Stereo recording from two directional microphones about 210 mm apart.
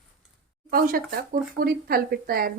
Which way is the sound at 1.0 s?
45° right (ahead or behind).